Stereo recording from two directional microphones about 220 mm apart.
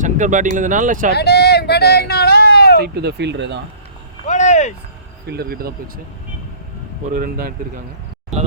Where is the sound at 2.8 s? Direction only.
50° right (ahead or behind).